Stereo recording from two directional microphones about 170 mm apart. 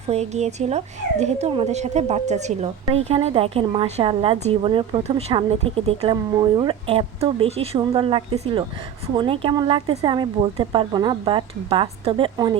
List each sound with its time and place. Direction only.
0.1 s a woman's voice: 40° right (ahead or behind)